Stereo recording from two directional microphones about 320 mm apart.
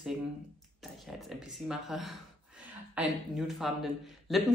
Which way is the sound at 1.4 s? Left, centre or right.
Centre.